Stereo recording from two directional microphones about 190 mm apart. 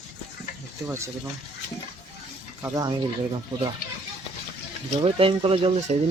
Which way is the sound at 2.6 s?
20° right (ahead or behind).